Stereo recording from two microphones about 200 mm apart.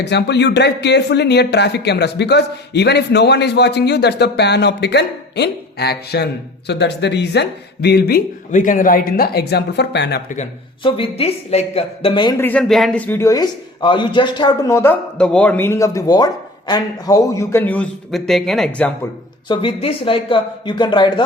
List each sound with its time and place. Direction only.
0.0 s speech: 60° left (ahead or behind)
10.2 s speech: 35° left (ahead or behind)
12.4 s a man's voice: 5° left (ahead or behind)
19.5 s speech: 25° left (ahead or behind)